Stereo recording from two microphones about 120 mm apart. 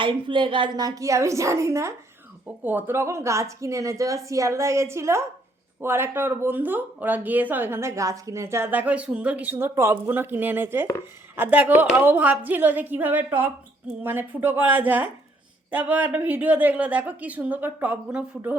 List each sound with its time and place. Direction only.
0.0 s speech: 45° right (ahead or behind)
0.8 s a woman's voice: 30° right (ahead or behind); by 18.5 s 10° right (ahead or behind)